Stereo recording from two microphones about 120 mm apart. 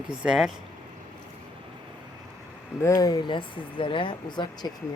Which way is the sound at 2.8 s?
30° left (ahead or behind).